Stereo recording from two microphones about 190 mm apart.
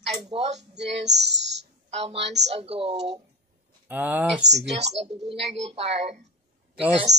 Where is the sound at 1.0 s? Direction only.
65° right (ahead or behind).